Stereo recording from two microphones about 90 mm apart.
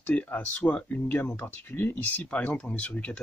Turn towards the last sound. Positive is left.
turn(degrees=15)  # may be behind; listen again after turning